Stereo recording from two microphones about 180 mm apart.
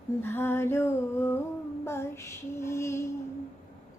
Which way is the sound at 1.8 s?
15° left (ahead or behind).